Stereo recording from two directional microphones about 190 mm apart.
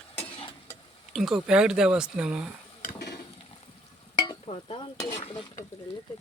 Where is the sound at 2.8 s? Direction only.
60° left (ahead or behind).